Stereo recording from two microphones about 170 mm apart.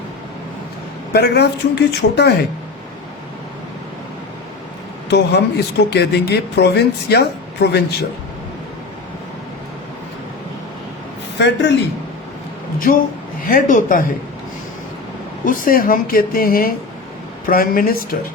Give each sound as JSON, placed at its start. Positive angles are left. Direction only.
{"t": 1.1, "sound": "speech", "side_deg": 75}
{"t": 5.0, "sound": "speech", "side_deg": 80}
{"t": 11.3, "sound": "a man's voice", "side_deg": 90}
{"t": 13.5, "sound": "speech", "side_deg": 50}
{"t": 15.4, "sound": "speech", "side_deg": 55}